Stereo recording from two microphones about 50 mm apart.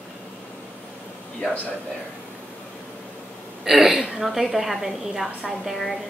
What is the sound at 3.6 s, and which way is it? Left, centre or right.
A woman's voice, centre.